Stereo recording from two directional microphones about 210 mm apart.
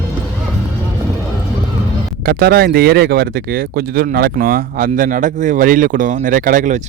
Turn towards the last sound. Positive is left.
turn(degrees=-35)  # may be behind; listen again after turning